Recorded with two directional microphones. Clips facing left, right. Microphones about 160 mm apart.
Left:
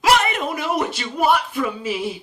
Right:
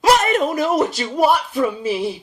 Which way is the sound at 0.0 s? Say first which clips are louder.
Right 3 dB; 40° right (ahead or behind).